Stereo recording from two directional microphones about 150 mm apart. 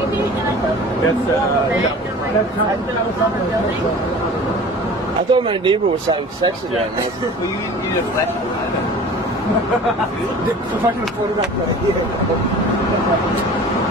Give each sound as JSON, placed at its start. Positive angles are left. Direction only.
{"t": 5.3, "sound": "speech", "side_deg": -35}